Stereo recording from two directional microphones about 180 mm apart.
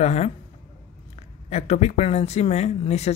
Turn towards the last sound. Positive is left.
turn(degrees=35)  # may be behind; listen again after turning